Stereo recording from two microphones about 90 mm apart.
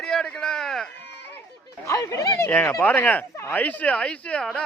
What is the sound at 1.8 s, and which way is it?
Speech, 35° left (ahead or behind).